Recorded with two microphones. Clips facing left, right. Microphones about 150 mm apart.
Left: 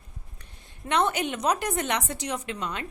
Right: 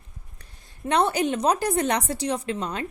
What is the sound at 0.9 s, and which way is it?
A woman's voice, 35° right (ahead or behind).